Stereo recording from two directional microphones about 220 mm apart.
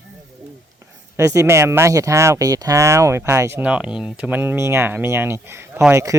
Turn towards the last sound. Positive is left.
turn(degrees=-10)  # may be behind; listen again after turning